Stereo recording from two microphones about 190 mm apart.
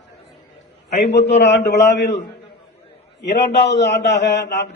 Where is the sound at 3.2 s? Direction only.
65° left (ahead or behind).